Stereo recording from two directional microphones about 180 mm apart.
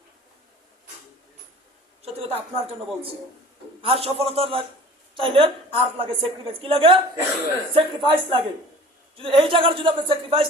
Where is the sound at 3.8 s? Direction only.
30° right (ahead or behind).